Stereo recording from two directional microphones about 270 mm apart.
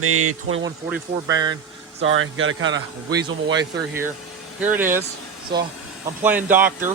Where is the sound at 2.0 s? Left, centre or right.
Right.